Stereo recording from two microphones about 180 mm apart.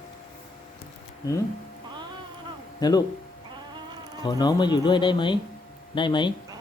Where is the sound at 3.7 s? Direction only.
25° right (ahead or behind).